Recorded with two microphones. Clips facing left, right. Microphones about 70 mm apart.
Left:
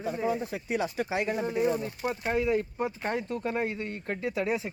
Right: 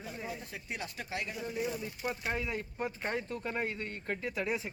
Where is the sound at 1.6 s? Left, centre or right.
Left.